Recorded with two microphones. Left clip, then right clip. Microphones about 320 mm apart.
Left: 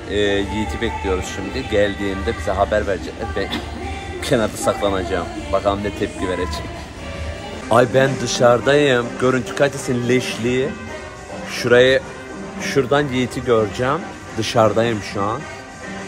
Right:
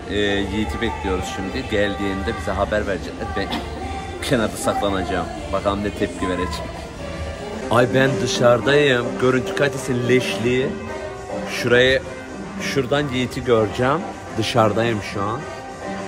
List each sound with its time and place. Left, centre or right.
0.1 s speech: centre
7.7 s speech: centre
12.6 s a man's voice: centre
13.5 s speech: centre